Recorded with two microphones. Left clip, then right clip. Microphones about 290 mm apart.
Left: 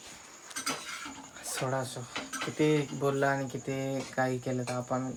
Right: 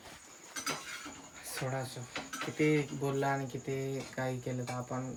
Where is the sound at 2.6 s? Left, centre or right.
Centre.